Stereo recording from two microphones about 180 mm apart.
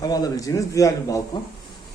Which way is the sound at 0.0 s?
20° left (ahead or behind).